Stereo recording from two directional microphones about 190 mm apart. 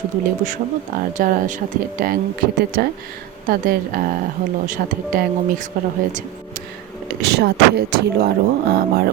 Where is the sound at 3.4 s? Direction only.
50° right (ahead or behind).